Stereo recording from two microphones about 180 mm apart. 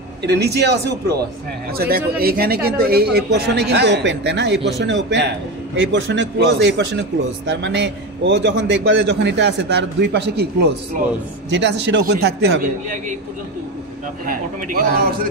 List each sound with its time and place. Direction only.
0.2 s speech: 65° right (ahead or behind)
5.8 s a man's voice: 85° right; by 13.0 s 65° right (ahead or behind)
14.2 s a man's voice: 50° right (ahead or behind)